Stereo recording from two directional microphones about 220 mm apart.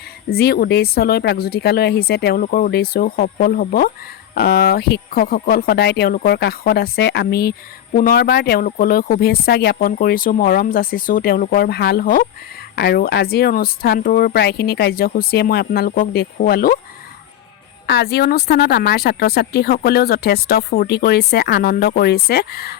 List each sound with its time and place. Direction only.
0.3 s speech: 45° left (ahead or behind)
17.8 s speech: 45° left (ahead or behind)